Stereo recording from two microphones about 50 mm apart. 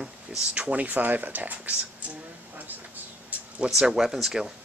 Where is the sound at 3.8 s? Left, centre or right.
Centre.